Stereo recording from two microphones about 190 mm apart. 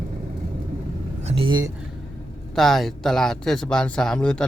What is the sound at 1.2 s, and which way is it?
Speech, 25° right (ahead or behind).